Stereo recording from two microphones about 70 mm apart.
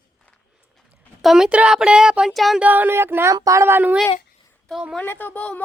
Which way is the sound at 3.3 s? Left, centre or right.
Right.